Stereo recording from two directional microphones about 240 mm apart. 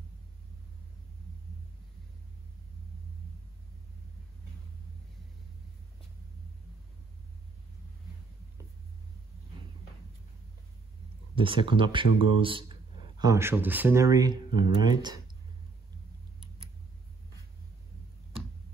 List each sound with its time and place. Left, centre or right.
11.3 s speech: right